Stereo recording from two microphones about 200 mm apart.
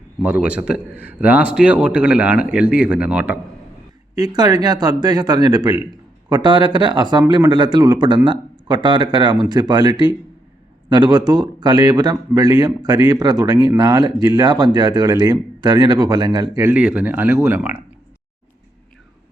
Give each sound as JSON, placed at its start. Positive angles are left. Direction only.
{"t": 0.2, "sound": "a man's voice", "side_deg": -5}
{"t": 4.1, "sound": "speech", "side_deg": -20}